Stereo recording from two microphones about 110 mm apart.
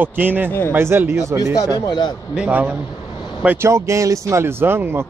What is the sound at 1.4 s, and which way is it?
Speech, 35° left (ahead or behind).